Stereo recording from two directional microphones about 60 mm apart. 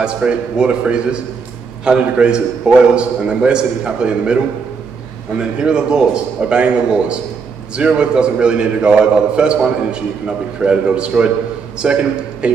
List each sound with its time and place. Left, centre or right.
0.0 s a man's voice: centre
5.4 s a man's voice: centre